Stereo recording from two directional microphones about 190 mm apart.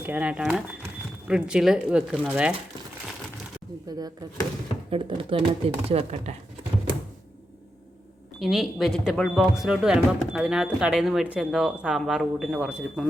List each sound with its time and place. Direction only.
0.0 s speech: 10° right (ahead or behind)
3.8 s speech: 20° right (ahead or behind)
8.4 s speech: centre (ahead or behind)